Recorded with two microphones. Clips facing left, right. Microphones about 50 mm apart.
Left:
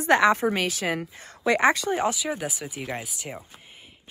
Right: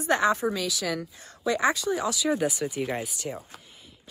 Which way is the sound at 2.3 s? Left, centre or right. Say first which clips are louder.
Right 6 dB; centre.